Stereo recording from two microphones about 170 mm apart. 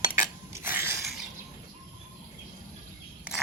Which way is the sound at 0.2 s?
15° right (ahead or behind).